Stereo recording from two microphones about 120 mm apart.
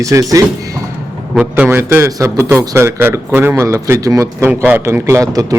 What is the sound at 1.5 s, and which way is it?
A man's voice, 15° right (ahead or behind).